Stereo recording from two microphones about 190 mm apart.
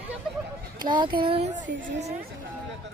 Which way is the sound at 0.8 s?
25° right (ahead or behind).